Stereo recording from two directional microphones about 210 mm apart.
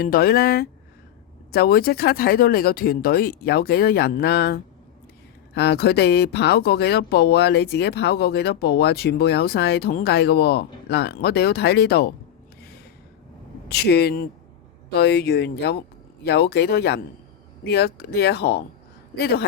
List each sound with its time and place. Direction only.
0.0 s speech: 45° left (ahead or behind)
13.7 s speech: 50° left (ahead or behind)